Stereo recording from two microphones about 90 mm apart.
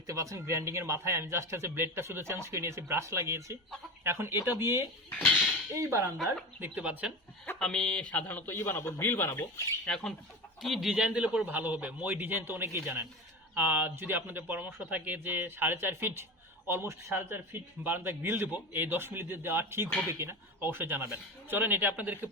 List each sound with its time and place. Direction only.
0.1 s a man's voice: 35° right (ahead or behind)
6.6 s speech: 15° right (ahead or behind)
7.4 s a man's voice: 10° left (ahead or behind); by 9.6 s 30° left (ahead or behind)
9.8 s speech: 5° left (ahead or behind)
11.4 s a man's voice: 20° right (ahead or behind)